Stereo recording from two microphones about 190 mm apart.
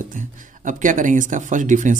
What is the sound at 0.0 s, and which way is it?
Speech, 45° right (ahead or behind).